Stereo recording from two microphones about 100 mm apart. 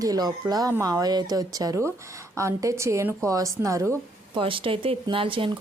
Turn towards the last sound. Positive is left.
turn(degrees=-60)  # may be behind; listen again after turning